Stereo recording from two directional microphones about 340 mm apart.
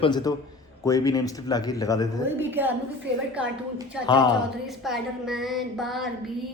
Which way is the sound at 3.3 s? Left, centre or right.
Centre.